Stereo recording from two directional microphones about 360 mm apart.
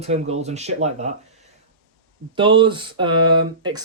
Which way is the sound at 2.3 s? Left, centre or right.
Centre.